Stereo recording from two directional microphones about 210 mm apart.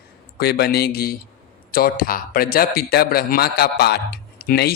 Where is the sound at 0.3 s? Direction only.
50° left (ahead or behind).